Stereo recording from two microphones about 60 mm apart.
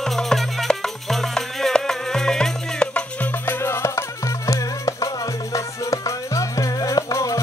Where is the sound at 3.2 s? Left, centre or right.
Left.